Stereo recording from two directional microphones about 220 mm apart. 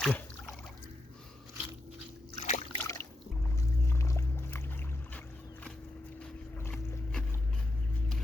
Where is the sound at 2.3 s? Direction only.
30° left (ahead or behind).